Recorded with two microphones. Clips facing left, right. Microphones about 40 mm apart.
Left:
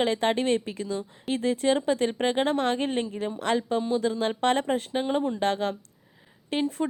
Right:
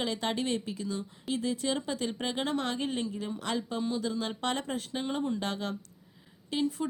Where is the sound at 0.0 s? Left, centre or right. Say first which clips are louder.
Left 7 dB; left.